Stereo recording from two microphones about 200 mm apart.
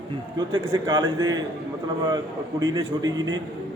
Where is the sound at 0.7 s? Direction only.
20° right (ahead or behind).